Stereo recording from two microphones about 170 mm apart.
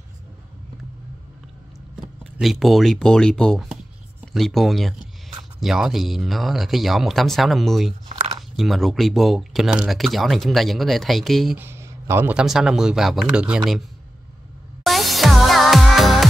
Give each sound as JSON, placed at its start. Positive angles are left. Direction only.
{"t": 2.0, "sound": "speech", "side_deg": -5}
{"t": 11.5, "sound": "speech", "side_deg": -15}
{"t": 14.8, "sound": "music", "side_deg": 0}